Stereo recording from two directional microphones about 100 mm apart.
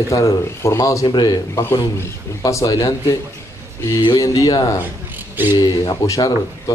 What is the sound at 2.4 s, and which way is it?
Speech, 35° left (ahead or behind).